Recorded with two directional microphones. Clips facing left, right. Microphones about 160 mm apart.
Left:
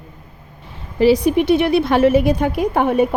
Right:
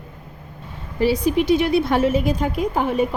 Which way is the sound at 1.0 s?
90° left.